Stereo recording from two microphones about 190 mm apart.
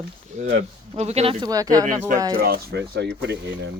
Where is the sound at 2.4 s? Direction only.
55° right (ahead or behind).